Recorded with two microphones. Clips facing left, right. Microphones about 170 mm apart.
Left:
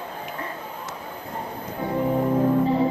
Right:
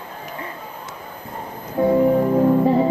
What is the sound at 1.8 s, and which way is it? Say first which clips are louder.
Music: right 12 dB; 55° right (ahead or behind).